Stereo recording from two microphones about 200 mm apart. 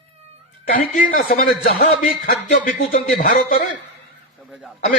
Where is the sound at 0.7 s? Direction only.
45° left (ahead or behind).